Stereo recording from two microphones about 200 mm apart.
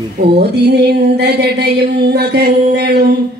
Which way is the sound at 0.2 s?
55° right (ahead or behind).